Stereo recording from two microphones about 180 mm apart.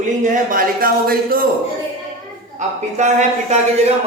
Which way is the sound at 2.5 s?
40° right (ahead or behind).